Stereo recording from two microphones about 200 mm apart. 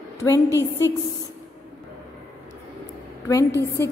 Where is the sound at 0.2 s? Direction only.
15° left (ahead or behind).